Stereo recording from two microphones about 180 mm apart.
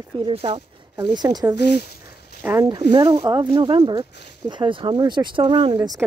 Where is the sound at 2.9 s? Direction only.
25° right (ahead or behind).